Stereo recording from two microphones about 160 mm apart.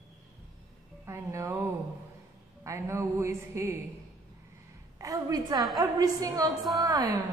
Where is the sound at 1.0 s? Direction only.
15° right (ahead or behind).